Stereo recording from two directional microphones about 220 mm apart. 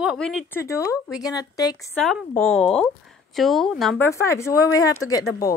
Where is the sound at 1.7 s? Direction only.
5° left (ahead or behind).